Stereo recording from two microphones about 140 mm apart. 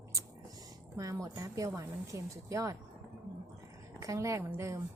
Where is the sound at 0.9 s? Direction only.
25° right (ahead or behind).